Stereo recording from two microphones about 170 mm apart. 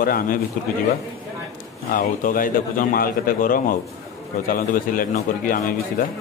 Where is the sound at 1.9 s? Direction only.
55° left (ahead or behind).